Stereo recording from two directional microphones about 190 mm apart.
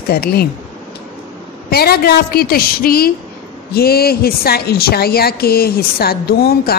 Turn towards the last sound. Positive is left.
turn(degrees=55)  # may be behind; listen again after turning